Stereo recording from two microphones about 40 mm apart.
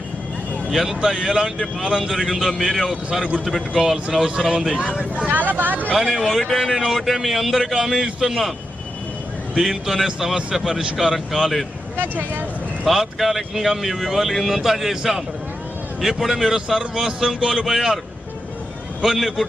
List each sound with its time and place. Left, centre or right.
0.7 s speech: centre
5.3 s speech: right
6.0 s speech: centre
6.7 s speech: centre
9.6 s speech: centre
11.9 s speech: right
12.8 s speech: centre
19.0 s speech: centre